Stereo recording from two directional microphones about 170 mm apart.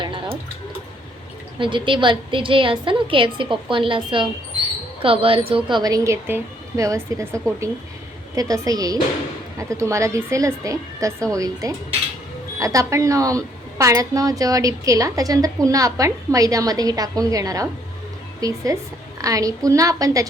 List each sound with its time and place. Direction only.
0.0 s a sound: 30° right (ahead or behind)
1.5 s a woman's voice: 30° right (ahead or behind)
8.4 s a woman's voice: 20° right (ahead or behind)